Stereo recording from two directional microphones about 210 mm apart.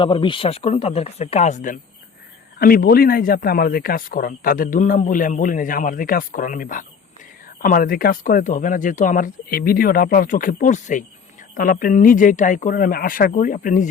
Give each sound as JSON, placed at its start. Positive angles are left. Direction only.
{"t": 0.0, "sound": "speech", "side_deg": 25}